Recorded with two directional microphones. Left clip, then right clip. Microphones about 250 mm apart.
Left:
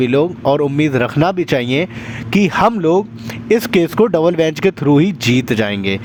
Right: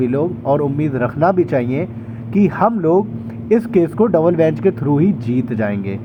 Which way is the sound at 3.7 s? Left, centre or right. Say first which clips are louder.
Left 1 dB; left.